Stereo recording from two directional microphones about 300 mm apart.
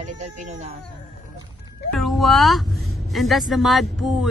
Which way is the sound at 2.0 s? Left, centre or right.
Centre.